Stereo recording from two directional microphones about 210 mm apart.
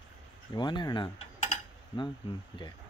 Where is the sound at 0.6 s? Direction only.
20° left (ahead or behind).